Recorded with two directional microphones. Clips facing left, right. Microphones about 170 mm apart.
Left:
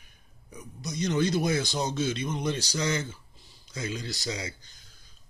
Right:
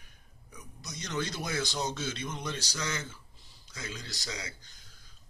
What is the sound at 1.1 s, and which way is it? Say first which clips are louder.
Speech: left 9 dB; 15° left (ahead or behind).